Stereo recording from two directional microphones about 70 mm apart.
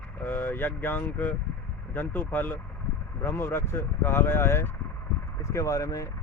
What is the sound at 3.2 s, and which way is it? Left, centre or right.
Speech, left.